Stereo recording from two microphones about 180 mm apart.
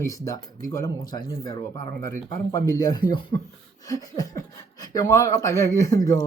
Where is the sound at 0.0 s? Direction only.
20° left (ahead or behind).